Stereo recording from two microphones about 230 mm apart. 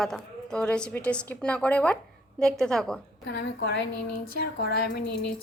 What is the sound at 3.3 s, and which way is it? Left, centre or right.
A woman's voice, left.